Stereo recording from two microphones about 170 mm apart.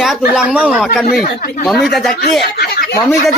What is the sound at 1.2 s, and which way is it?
Speech, 60° left (ahead or behind).